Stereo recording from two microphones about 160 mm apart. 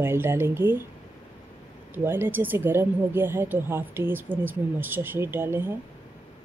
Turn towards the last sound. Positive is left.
turn(degrees=-15)  # may be behind; listen again after turning